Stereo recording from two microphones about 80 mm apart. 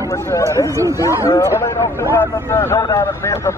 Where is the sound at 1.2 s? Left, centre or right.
Left.